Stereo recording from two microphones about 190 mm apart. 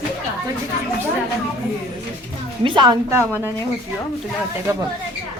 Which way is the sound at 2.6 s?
25° right (ahead or behind).